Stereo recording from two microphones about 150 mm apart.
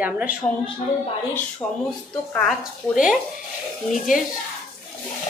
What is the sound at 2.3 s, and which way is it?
Speech, centre (ahead or behind).